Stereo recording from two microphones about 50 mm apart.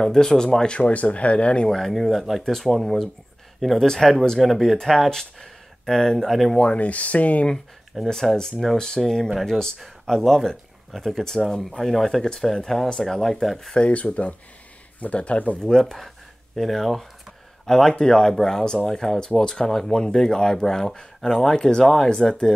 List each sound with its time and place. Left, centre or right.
0.0 s speech: centre
1.7 s speech: centre
6.6 s speech: left
8.0 s speech: centre
13.7 s speech: left
15.6 s speech: centre